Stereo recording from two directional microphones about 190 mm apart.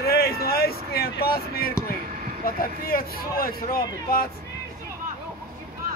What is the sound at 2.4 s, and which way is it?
Speech, 50° left (ahead or behind).